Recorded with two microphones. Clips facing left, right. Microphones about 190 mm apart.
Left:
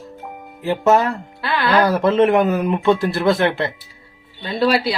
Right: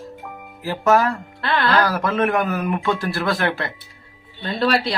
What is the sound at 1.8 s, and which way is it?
Speech, 25° left (ahead or behind).